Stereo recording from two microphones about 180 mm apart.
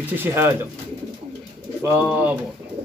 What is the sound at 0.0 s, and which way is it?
Speech, 10° right (ahead or behind).